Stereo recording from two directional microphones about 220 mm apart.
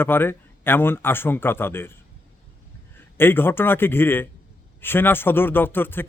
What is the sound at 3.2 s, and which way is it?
Speech, 10° left (ahead or behind).